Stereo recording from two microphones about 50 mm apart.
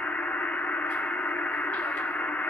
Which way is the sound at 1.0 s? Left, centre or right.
Left.